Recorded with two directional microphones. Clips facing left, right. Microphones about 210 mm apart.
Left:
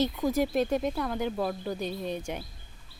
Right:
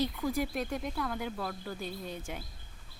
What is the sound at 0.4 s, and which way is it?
Speech, 25° left (ahead or behind).